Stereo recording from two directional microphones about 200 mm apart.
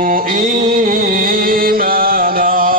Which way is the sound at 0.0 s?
45° right (ahead or behind).